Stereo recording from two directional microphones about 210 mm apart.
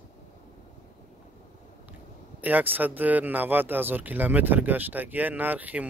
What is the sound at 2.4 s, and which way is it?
Speech, 10° right (ahead or behind).